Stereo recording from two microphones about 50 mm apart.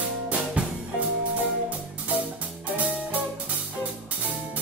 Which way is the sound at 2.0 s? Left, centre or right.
Right.